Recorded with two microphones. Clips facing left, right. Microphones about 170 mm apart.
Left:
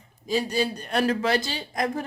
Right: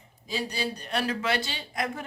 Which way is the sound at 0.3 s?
45° left (ahead or behind).